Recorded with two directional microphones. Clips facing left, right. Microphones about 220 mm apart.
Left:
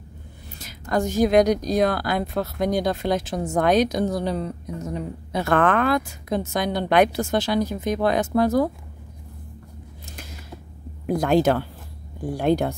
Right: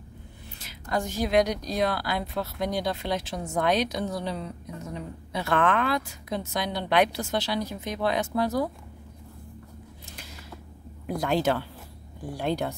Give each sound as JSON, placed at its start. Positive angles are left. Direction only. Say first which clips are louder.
{"t": 0.6, "sound": "a woman's voice", "louder": "left 6 dB", "side_deg": 45}
{"t": 11.1, "sound": "a woman's voice", "louder": "left 6 dB", "side_deg": 45}